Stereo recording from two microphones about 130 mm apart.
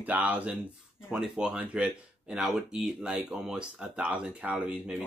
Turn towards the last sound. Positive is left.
turn(degrees=-5)  # may be behind; listen again after turning